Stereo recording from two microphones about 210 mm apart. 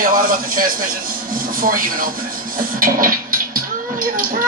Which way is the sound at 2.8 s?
40° right (ahead or behind).